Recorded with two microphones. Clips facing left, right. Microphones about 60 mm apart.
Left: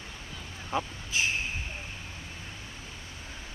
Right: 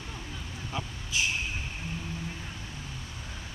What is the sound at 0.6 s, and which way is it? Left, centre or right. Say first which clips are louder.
Vehicle: left 6 dB; left.